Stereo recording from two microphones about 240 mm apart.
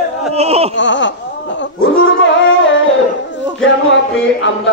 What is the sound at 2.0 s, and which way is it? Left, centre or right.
Dog, left.